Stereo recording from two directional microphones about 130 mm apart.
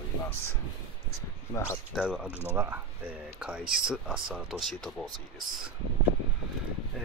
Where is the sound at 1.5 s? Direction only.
25° left (ahead or behind).